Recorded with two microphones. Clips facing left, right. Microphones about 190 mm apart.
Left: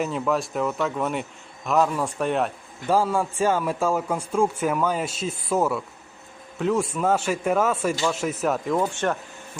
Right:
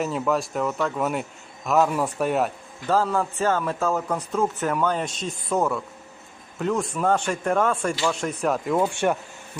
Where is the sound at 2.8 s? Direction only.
10° left (ahead or behind).